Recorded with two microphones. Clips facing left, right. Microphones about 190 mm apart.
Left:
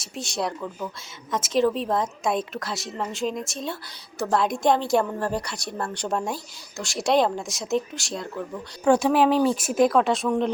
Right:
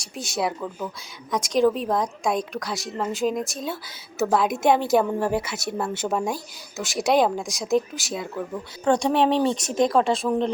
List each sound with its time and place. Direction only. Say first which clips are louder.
0.0 s a woman's voice: right 2 dB; centre (ahead or behind)
8.8 s a woman's voice: left 1 dB; 5° left (ahead or behind)